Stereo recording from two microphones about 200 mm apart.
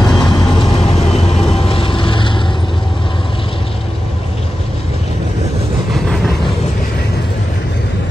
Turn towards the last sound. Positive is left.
turn(degrees=5)  # may be behind; listen again after turning